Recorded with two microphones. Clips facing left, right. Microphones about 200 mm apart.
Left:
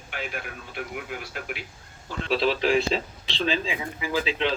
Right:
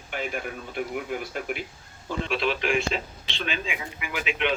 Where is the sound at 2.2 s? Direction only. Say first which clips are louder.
Left 4 dB; 35° left (ahead or behind).